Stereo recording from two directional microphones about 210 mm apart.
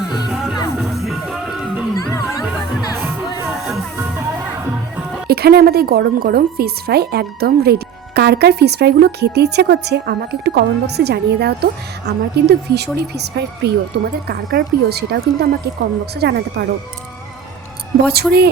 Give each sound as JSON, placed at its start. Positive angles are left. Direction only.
{"t": 0.3, "sound": "music", "side_deg": 0}
{"t": 5.3, "sound": "speech", "side_deg": -50}
{"t": 18.0, "sound": "speech", "side_deg": -50}